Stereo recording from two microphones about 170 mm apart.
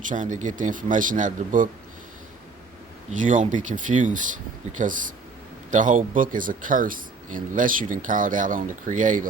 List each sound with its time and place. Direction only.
0.1 s speech: 50° right (ahead or behind)
3.2 s speech: 50° right (ahead or behind)